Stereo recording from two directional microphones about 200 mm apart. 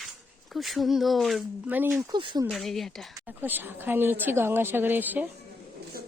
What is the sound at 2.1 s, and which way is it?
Speech, 20° right (ahead or behind).